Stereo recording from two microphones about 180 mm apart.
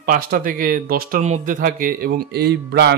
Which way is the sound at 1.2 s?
45° right (ahead or behind).